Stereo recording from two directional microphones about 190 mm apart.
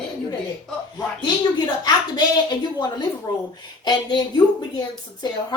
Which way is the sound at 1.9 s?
20° left (ahead or behind).